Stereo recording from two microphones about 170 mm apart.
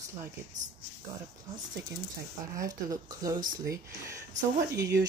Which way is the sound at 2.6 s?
20° right (ahead or behind).